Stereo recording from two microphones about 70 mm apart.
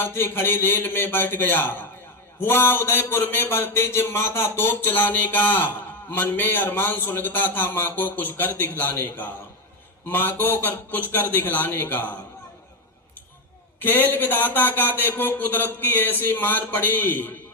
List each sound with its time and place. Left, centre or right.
0.0 s a man's voice: left
13.7 s a man's voice: left